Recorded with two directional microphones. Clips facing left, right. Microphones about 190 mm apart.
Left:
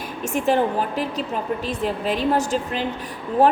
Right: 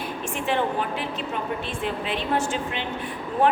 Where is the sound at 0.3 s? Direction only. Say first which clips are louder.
Left 6 dB; 40° left (ahead or behind).